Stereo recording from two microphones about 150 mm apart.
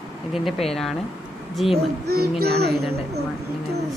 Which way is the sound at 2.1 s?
90° right.